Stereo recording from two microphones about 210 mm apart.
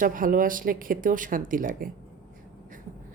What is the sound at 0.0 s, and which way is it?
Speech, 40° right (ahead or behind).